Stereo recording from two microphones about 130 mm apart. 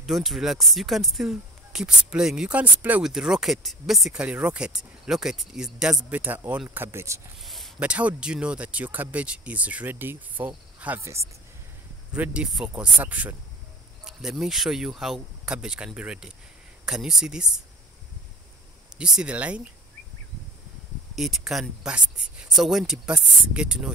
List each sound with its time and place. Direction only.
0.0 s speech: centre (ahead or behind); by 7.2 s 20° right (ahead or behind)
7.4 s a sound: centre (ahead or behind)
7.8 s speech: 10° right (ahead or behind)
12.1 s speech: 10° right (ahead or behind)
18.9 s speech: 5° right (ahead or behind)
21.2 s speech: centre (ahead or behind)